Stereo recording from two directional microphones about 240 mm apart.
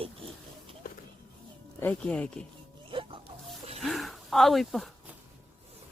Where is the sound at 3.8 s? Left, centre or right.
Centre.